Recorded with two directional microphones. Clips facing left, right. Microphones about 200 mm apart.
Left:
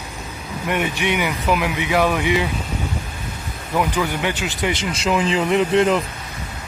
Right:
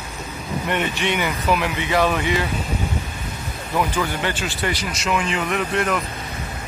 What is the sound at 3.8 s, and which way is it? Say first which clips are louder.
Speech: left 2 dB; 15° left (ahead or behind).